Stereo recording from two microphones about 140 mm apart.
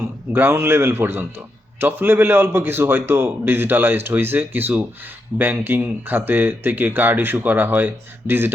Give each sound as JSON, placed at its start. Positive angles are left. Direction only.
{"t": 0.3, "sound": "speech", "side_deg": -15}